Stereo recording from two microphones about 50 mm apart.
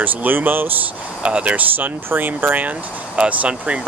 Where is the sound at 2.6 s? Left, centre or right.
Right.